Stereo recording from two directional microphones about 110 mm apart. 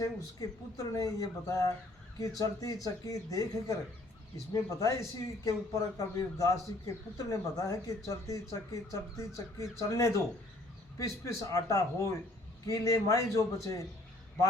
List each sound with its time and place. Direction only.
0.0 s a man's voice: 30° left (ahead or behind)